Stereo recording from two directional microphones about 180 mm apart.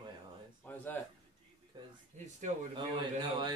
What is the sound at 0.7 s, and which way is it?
Speech, 10° left (ahead or behind).